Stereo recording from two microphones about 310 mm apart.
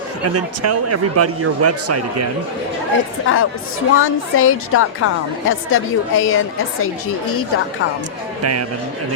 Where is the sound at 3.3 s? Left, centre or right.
Left.